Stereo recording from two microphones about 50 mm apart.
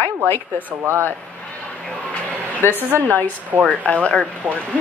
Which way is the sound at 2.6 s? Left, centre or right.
Left.